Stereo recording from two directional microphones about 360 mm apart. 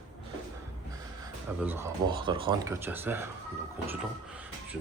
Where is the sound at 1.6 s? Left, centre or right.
Centre.